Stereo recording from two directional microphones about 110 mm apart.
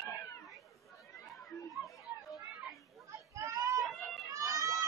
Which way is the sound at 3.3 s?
30° right (ahead or behind).